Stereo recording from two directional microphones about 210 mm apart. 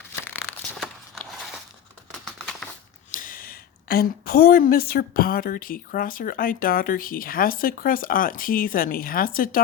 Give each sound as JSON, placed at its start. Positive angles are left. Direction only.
{"t": 0.7, "sound": "walk", "side_deg": 0}
{"t": 2.2, "sound": "crumpling", "side_deg": 0}
{"t": 3.1, "sound": "a woman's voice", "side_deg": 40}